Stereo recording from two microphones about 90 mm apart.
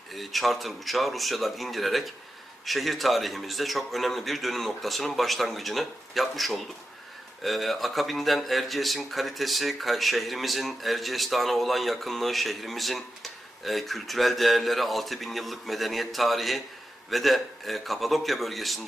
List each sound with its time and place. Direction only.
0.1 s speech: centre (ahead or behind)